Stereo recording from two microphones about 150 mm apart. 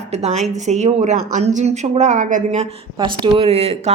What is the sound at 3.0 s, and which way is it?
Speech, 35° right (ahead or behind).